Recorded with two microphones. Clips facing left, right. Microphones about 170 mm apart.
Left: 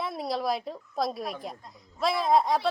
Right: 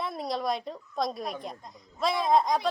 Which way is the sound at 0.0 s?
Centre (ahead or behind).